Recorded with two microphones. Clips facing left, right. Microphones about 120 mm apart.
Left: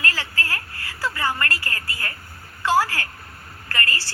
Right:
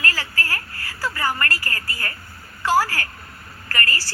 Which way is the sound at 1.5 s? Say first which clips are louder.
Right 1 dB; 20° left (ahead or behind).